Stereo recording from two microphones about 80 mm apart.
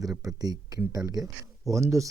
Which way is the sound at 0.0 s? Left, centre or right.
Right.